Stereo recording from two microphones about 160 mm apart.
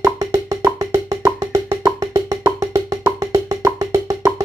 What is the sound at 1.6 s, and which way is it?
Wood block, 25° right (ahead or behind).